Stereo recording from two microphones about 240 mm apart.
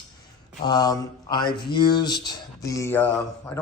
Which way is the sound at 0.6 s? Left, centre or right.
Centre.